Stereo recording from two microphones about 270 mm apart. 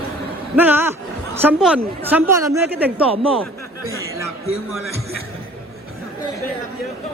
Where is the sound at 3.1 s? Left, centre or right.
Right.